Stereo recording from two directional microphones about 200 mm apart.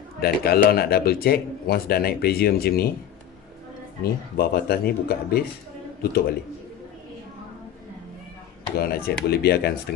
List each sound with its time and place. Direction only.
0.2 s a man's voice: 50° left (ahead or behind)
4.0 s a man's voice: 50° left (ahead or behind)
8.7 s a man's voice: 50° left (ahead or behind)